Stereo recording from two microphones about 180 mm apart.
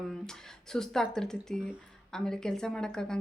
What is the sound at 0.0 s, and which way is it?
Speech, 5° left (ahead or behind).